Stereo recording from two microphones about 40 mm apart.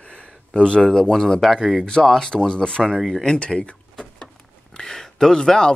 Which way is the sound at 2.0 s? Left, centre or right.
Centre.